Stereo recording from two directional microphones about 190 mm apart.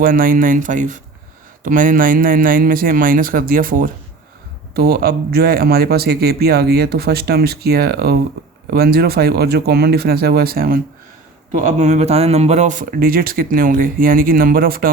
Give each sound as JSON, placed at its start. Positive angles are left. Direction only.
{"t": 0.0, "sound": "a man's voice", "side_deg": -45}
{"t": 11.5, "sound": "speech", "side_deg": -40}